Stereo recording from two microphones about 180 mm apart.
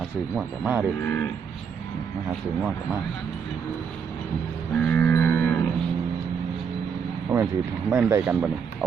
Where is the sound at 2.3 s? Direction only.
5° right (ahead or behind).